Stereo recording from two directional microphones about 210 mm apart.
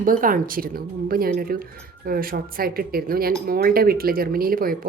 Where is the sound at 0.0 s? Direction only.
40° right (ahead or behind).